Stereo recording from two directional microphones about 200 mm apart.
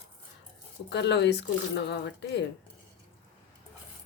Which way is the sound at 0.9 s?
60° left (ahead or behind).